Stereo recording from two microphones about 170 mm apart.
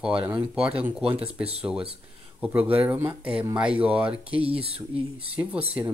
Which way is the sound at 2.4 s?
10° right (ahead or behind).